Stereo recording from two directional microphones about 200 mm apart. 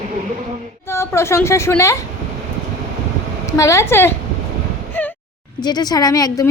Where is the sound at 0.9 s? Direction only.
15° left (ahead or behind).